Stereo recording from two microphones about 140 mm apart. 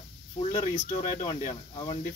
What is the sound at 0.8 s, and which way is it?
Speech, 75° left (ahead or behind).